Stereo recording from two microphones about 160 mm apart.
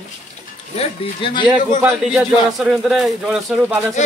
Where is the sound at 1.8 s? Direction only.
5° right (ahead or behind).